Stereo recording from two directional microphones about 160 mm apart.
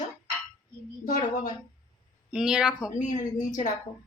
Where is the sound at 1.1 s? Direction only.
50° left (ahead or behind).